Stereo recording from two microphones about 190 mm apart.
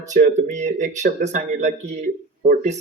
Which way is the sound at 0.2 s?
45° right (ahead or behind).